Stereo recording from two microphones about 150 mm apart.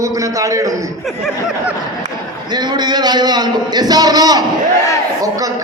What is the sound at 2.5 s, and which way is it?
A man's voice, 30° right (ahead or behind).